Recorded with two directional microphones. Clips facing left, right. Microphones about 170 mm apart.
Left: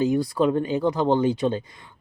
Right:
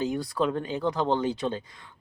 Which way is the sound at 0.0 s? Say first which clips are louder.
Left 6 dB; 5° left (ahead or behind).